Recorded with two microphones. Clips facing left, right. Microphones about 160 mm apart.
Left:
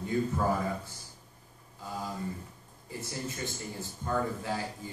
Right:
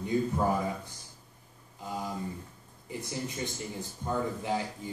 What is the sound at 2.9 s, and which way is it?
Speech, 20° right (ahead or behind).